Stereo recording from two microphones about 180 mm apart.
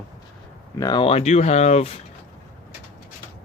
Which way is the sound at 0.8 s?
25° left (ahead or behind).